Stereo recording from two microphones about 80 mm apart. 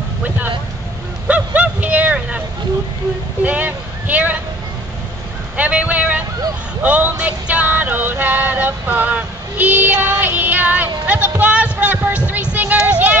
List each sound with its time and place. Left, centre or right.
1.2 s vehicle: centre
3.4 s speech: centre
5.6 s speech: centre
6.8 s music: right